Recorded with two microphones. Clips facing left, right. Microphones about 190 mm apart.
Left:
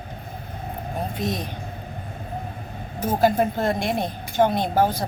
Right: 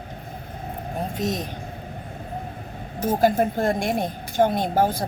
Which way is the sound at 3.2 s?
50° right (ahead or behind).